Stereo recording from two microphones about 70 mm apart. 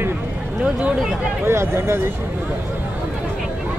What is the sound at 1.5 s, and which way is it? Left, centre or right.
Speech, right.